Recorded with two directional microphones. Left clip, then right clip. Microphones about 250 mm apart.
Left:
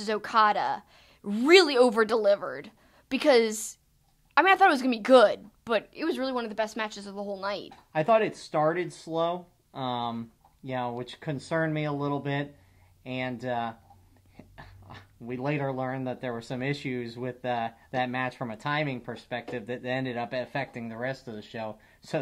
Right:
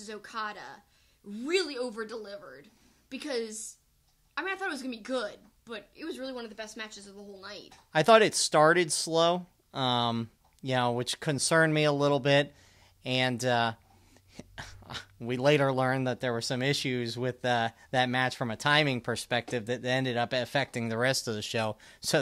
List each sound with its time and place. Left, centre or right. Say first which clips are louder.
0.0 s a woman's voice: left 14 dB; left
7.9 s speech: right 3 dB; right